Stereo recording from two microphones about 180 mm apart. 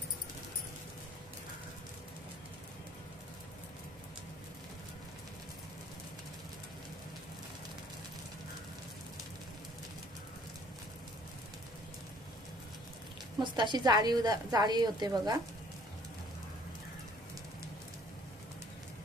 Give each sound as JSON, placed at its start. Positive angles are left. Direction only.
{"t": 13.4, "sound": "a woman's voice", "side_deg": -25}